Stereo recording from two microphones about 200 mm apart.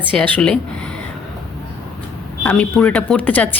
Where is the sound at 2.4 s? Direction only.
5° left (ahead or behind).